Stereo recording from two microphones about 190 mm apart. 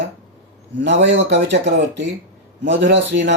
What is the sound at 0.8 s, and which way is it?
Speech, 70° right (ahead or behind).